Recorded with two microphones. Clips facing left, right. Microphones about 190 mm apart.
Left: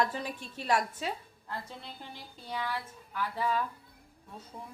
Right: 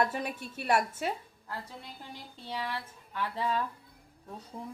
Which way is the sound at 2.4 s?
30° right (ahead or behind).